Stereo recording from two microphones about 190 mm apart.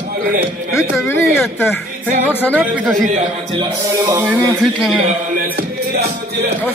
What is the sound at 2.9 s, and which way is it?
Speech, 40° right (ahead or behind).